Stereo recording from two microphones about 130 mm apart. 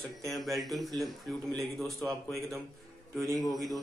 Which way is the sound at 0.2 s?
Centre (ahead or behind).